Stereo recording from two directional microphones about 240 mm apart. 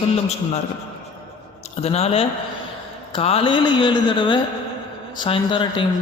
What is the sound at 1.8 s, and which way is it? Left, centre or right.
A man's voice, left.